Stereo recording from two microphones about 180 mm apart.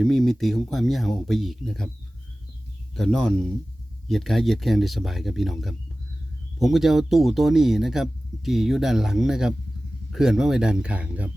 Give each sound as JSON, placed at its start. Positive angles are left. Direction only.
{"t": 0.0, "sound": "speech", "side_deg": 0}
{"t": 2.9, "sound": "speech", "side_deg": 5}